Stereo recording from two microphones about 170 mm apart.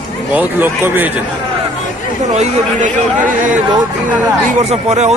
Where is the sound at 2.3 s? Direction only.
45° right (ahead or behind).